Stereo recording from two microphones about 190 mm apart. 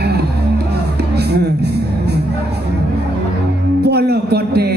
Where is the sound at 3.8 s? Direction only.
55° right (ahead or behind).